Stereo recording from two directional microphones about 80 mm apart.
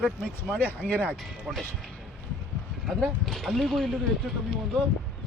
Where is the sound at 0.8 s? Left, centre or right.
Left.